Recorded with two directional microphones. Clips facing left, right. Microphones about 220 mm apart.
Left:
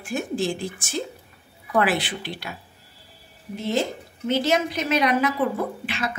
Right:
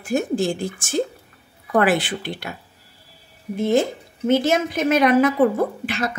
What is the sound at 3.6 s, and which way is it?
Speech, 50° right (ahead or behind).